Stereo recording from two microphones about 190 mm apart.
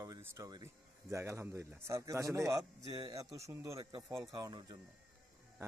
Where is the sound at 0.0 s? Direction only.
20° right (ahead or behind).